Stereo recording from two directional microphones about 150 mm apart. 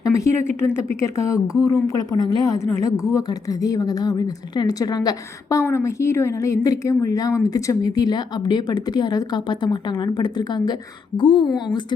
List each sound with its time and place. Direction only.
0.0 s a woman's voice: 20° left (ahead or behind)